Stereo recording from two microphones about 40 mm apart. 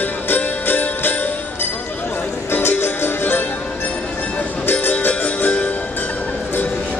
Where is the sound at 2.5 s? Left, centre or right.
Left.